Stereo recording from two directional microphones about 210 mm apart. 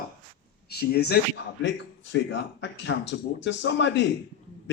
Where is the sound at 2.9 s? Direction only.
60° left (ahead or behind).